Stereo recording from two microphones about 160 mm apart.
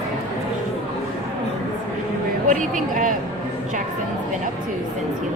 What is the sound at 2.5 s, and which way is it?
Speech, 55° right (ahead or behind).